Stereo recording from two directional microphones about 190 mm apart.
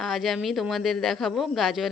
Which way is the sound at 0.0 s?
Centre (ahead or behind).